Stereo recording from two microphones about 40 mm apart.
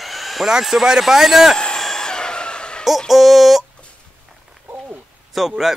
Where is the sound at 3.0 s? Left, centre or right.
Centre.